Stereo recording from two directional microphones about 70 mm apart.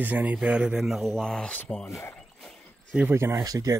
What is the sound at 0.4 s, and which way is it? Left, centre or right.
Speech, centre.